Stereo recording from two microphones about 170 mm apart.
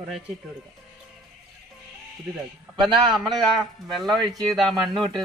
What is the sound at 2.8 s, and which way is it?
Speech, 25° right (ahead or behind).